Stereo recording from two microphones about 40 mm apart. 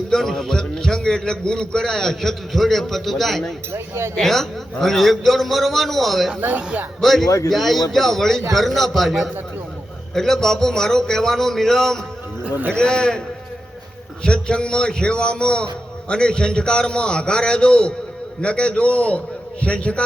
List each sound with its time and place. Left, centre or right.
0.1 s a man's voice: centre
12.5 s a man's voice: right
12.7 s a man's voice: centre
14.3 s a man's voice: left